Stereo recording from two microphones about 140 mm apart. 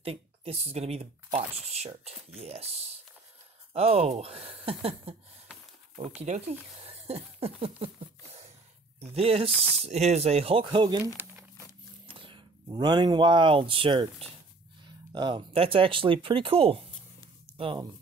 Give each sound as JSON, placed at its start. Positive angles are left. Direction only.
{"t": 0.0, "sound": "speech", "side_deg": -45}
{"t": 6.2, "sound": "speech", "side_deg": -55}
{"t": 6.8, "sound": "a sound", "side_deg": -45}
{"t": 9.0, "sound": "speech", "side_deg": -45}
{"t": 9.8, "sound": "speech", "side_deg": -50}
{"t": 11.2, "sound": "speech", "side_deg": -15}
{"t": 12.1, "sound": "speech", "side_deg": -40}